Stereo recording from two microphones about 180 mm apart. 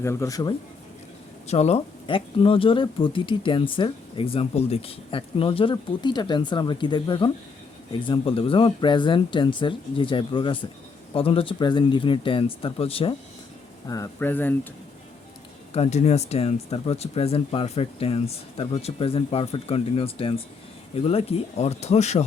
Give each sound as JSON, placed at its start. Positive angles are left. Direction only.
{"t": 0.0, "sound": "speech", "side_deg": 15}
{"t": 1.5, "sound": "speech", "side_deg": 35}
{"t": 13.8, "sound": "speech", "side_deg": 20}
{"t": 15.7, "sound": "speech", "side_deg": 35}